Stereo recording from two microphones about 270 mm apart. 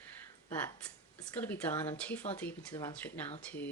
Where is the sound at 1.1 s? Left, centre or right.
Centre.